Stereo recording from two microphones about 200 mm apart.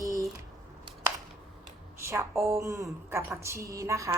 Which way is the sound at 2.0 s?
15° right (ahead or behind).